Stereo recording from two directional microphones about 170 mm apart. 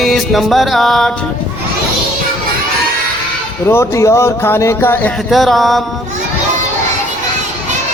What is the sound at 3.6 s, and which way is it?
Music, 15° left (ahead or behind).